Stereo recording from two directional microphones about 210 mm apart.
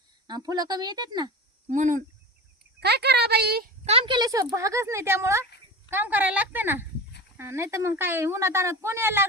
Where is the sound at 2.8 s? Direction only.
50° right (ahead or behind).